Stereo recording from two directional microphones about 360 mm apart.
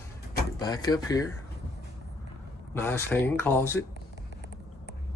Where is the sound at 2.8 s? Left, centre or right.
Centre.